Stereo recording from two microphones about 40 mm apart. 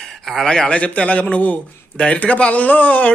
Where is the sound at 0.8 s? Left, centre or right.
Left.